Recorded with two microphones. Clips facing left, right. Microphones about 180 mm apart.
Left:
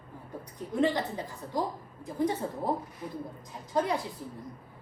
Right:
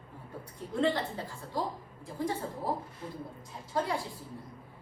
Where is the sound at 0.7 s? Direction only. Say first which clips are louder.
Left 2 dB; 20° left (ahead or behind).